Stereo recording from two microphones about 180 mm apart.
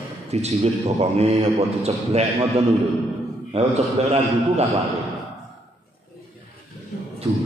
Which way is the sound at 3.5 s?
35° right (ahead or behind).